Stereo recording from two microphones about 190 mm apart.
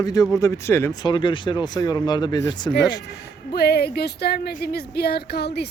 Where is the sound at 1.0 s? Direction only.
25° left (ahead or behind).